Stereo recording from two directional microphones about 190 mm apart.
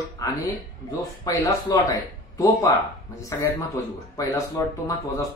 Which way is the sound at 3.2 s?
20° left (ahead or behind).